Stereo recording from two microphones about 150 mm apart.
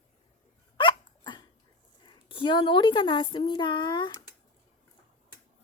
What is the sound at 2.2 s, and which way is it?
Speech, 35° left (ahead or behind).